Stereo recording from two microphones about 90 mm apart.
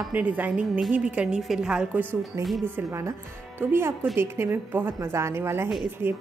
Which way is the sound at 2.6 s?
30° right (ahead or behind).